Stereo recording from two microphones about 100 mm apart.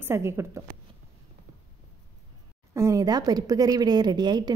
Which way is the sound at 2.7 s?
30° right (ahead or behind).